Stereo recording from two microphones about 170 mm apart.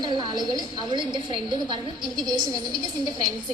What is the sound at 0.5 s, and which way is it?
A woman's voice, 30° right (ahead or behind).